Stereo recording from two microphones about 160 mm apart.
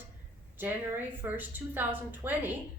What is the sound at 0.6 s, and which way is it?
A woman's voice, 10° right (ahead or behind).